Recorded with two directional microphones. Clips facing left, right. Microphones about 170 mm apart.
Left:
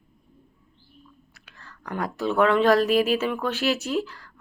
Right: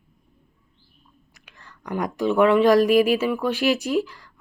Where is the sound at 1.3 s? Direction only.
15° right (ahead or behind).